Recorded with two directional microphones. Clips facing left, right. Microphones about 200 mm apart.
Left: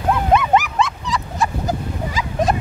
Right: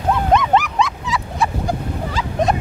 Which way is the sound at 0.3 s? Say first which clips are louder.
Even; 5° left (ahead or behind).